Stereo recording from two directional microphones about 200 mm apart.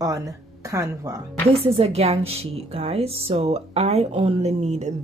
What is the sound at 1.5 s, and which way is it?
Speech, 30° right (ahead or behind).